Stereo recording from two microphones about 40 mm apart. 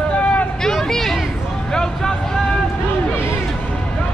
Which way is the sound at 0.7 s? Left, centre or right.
Centre.